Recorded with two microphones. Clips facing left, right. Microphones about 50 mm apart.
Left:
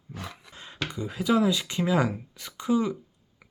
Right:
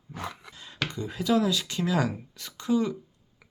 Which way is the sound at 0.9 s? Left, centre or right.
Centre.